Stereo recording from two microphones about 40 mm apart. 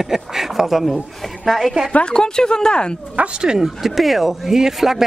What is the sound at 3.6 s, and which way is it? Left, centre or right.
Speech, centre.